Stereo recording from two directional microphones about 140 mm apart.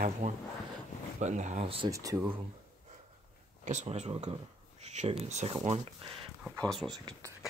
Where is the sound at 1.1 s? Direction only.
60° right (ahead or behind).